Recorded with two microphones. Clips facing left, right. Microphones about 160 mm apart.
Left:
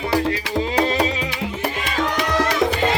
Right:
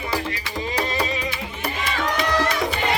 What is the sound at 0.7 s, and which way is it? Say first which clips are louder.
Music: left 5 dB; 75° left (ahead or behind).